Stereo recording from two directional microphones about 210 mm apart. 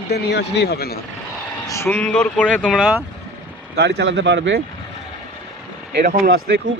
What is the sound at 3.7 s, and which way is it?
Speech, 55° right (ahead or behind).